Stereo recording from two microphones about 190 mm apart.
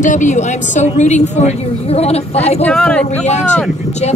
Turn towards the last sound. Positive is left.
turn(degrees=5)  # may be behind; listen again after turning